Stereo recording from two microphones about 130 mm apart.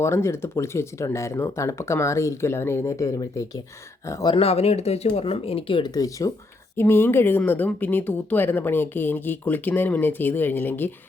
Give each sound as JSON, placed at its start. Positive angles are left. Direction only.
{"t": 0.0, "sound": "speech", "side_deg": 20}
{"t": 4.4, "sound": "speech", "side_deg": 50}
{"t": 5.9, "sound": "speech", "side_deg": 25}